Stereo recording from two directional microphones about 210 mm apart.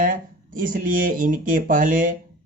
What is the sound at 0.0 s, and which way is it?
Speech, 40° right (ahead or behind).